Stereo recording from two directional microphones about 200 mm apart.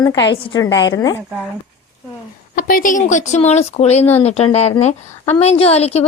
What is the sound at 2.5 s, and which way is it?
A woman's voice, 45° left (ahead or behind).